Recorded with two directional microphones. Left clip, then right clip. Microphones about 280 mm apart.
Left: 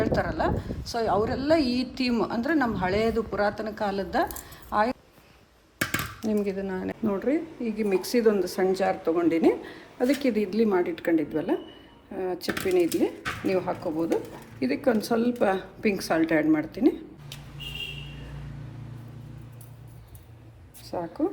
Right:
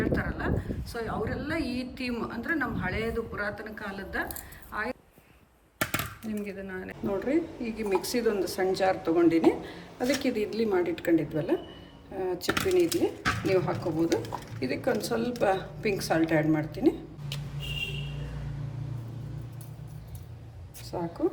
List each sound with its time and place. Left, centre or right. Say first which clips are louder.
0.0 s a woman's voice: left 5 dB; centre
6.2 s speech: left 9 dB; centre